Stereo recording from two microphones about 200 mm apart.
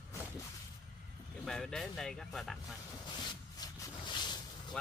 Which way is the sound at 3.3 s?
20° left (ahead or behind).